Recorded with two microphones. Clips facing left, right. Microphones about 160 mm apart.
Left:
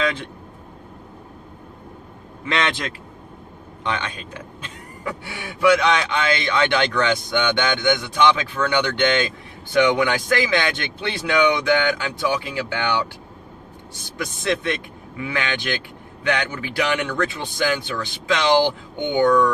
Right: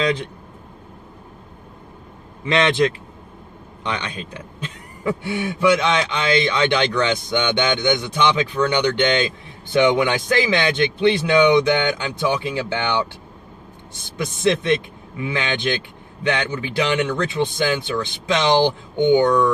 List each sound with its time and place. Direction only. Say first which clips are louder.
0.0 s a man's voice: right 3 dB; 15° right (ahead or behind)
2.4 s speech: right 5 dB; 20° right (ahead or behind)
3.8 s speech: even; 20° right (ahead or behind)
14.2 s speech: right 4 dB; 25° right (ahead or behind)